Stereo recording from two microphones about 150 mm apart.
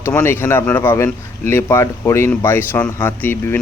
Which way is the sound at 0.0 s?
15° left (ahead or behind).